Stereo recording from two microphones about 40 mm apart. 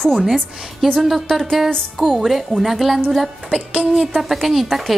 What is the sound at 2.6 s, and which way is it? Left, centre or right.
Speech, centre.